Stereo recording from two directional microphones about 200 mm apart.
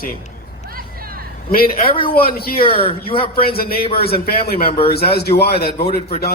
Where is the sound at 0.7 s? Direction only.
45° right (ahead or behind).